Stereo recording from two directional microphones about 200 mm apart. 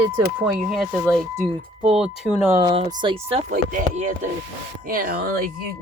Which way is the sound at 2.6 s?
25° right (ahead or behind).